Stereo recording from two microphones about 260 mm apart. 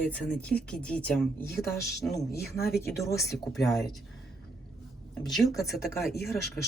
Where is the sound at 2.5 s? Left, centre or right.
Left.